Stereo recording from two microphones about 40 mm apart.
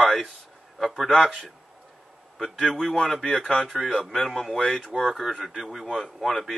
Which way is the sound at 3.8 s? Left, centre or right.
Centre.